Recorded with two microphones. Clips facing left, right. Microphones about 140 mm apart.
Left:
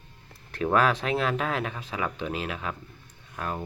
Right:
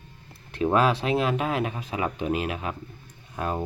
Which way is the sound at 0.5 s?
25° right (ahead or behind).